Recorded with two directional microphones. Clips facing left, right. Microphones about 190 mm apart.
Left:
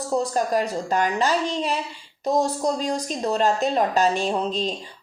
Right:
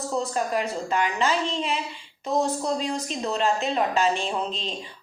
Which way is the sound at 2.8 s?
40° left (ahead or behind).